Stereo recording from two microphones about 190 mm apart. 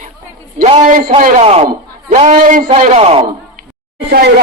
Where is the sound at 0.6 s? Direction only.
40° right (ahead or behind).